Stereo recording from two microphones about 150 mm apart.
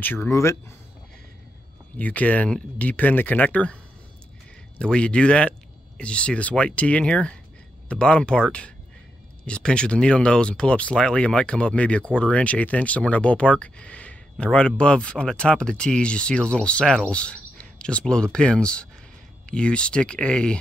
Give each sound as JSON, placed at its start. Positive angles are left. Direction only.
{"t": 0.0, "sound": "speech", "side_deg": 15}
{"t": 2.0, "sound": "speech", "side_deg": 10}
{"t": 4.7, "sound": "speech", "side_deg": 5}